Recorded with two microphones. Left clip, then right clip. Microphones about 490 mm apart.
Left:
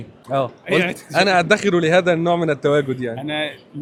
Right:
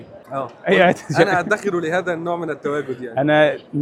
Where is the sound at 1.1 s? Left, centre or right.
Left.